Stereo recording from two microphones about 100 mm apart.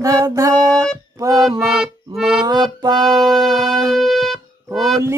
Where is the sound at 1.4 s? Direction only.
5° right (ahead or behind).